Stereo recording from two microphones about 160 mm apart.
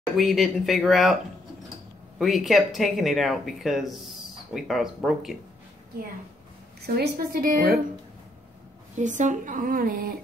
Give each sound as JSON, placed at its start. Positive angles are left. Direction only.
{"t": 0.2, "sound": "speech", "side_deg": 0}
{"t": 2.1, "sound": "speech", "side_deg": 0}
{"t": 7.0, "sound": "speech", "side_deg": -65}
{"t": 8.9, "sound": "speech", "side_deg": -50}